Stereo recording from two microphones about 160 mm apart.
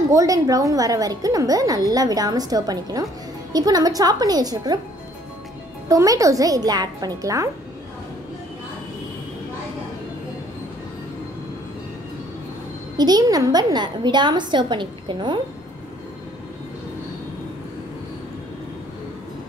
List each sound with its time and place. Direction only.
0.1 s a woman's voice: 20° right (ahead or behind)
5.9 s a woman's voice: 20° right (ahead or behind)
12.9 s a woman's voice: 25° right (ahead or behind)